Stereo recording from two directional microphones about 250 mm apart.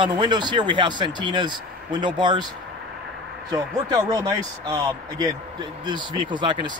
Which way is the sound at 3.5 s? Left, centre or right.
Centre.